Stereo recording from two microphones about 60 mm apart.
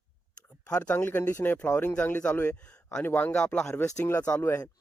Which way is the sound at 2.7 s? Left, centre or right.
Centre.